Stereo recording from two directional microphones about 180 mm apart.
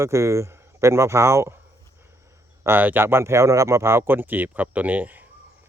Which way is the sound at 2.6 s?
10° right (ahead or behind).